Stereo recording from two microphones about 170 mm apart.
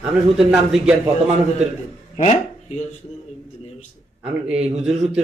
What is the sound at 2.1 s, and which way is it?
Speech, 40° left (ahead or behind).